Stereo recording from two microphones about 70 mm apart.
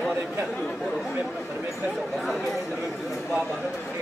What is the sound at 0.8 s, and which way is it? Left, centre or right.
Speech, centre.